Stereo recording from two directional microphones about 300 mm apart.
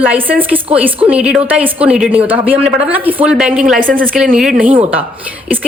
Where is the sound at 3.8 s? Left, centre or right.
Right.